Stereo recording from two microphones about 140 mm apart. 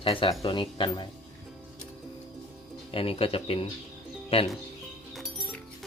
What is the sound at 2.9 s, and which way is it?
Speech, 40° left (ahead or behind).